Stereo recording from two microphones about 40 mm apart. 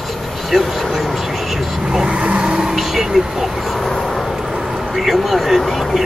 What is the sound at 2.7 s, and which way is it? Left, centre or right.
Speech, centre.